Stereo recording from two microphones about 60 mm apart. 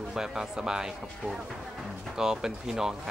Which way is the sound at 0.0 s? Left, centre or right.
Centre.